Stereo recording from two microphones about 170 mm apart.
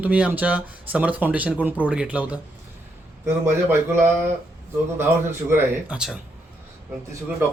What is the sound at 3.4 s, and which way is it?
Speech, 15° right (ahead or behind).